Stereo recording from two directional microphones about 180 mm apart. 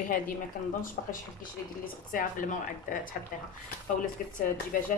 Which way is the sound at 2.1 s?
50° left (ahead or behind).